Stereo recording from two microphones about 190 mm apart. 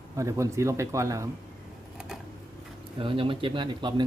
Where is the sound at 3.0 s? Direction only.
25° right (ahead or behind).